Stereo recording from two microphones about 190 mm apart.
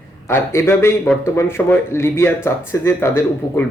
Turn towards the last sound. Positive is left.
turn(degrees=15)  # may be behind; listen again after turning